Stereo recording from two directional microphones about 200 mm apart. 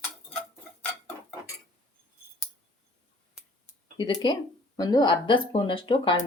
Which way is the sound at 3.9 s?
25° left (ahead or behind).